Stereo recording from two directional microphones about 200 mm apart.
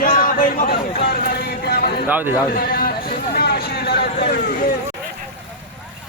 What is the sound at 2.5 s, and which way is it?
Speech, 50° left (ahead or behind).